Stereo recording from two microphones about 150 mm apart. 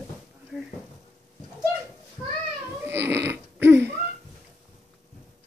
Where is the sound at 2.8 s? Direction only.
15° right (ahead or behind).